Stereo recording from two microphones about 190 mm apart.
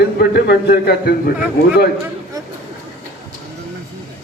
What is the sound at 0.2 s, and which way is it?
Speech, 55° left (ahead or behind).